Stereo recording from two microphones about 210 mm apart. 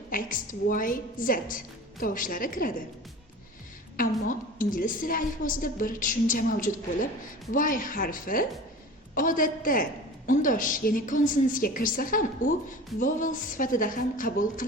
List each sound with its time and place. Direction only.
0.1 s a woman's voice: 40° left (ahead or behind)
3.9 s a woman's voice: 40° left (ahead or behind)